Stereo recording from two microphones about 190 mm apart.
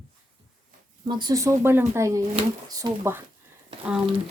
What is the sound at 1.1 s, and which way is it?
Speech, 20° right (ahead or behind).